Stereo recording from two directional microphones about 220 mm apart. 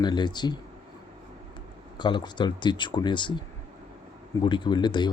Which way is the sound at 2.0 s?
20° left (ahead or behind).